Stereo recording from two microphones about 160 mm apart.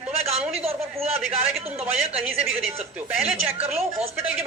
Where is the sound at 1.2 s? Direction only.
10° right (ahead or behind).